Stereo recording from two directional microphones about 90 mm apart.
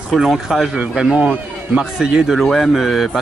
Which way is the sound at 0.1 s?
5° right (ahead or behind).